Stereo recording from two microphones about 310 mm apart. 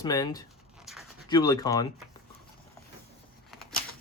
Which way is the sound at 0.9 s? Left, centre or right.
Centre.